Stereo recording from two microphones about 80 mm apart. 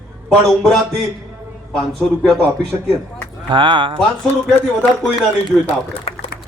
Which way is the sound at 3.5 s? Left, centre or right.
Right.